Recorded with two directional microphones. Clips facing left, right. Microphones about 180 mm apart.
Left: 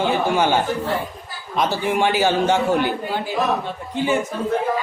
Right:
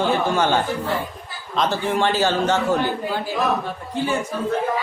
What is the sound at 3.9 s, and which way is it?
Speech, 15° left (ahead or behind).